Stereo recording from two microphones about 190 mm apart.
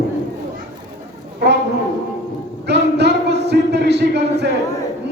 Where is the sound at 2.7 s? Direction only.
60° right (ahead or behind).